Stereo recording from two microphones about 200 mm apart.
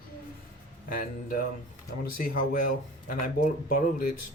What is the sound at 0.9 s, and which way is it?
Speech, 45° left (ahead or behind).